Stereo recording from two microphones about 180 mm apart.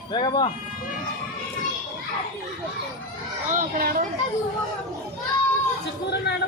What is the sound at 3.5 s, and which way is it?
Speech, 55° right (ahead or behind).